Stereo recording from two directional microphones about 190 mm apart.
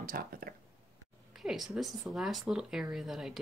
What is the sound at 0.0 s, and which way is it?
Speech, 50° right (ahead or behind).